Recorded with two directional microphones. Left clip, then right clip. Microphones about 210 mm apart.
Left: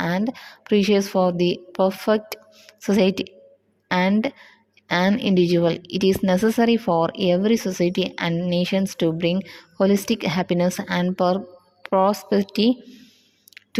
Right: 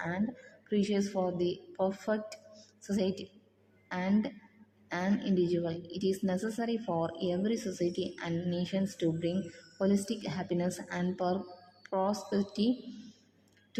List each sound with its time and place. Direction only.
0.7 s a woman's voice: 45° left (ahead or behind)